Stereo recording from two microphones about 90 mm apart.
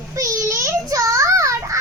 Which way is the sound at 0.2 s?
35° right (ahead or behind).